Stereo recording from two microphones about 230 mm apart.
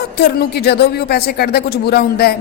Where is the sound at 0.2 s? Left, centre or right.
Left.